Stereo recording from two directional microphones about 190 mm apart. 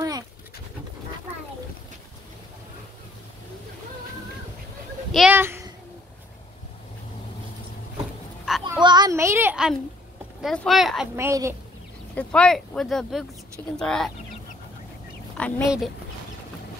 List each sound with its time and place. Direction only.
5.1 s speech: 5° right (ahead or behind)
8.5 s a sound: centre (ahead or behind)
8.8 s a sound: 20° right (ahead or behind)
10.4 s speech: centre (ahead or behind)
11.1 s a woman's voice: 15° right (ahead or behind)
12.2 s speech: 5° left (ahead or behind)
15.3 s speech: 5° left (ahead or behind)